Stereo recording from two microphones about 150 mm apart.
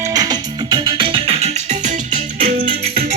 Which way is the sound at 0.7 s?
30° right (ahead or behind).